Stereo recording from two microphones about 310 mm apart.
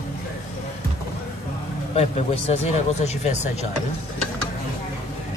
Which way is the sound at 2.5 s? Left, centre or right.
Left.